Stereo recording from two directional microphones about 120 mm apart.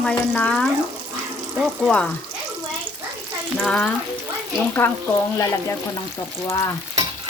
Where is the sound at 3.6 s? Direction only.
10° left (ahead or behind).